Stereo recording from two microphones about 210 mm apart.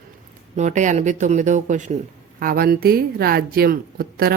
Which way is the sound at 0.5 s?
35° right (ahead or behind).